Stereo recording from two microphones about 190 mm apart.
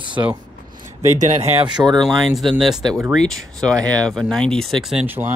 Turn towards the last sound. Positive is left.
turn(degrees=-10)  # may be behind; listen again after turning